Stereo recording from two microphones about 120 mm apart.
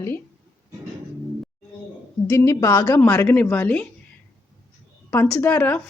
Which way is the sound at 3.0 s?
15° left (ahead or behind).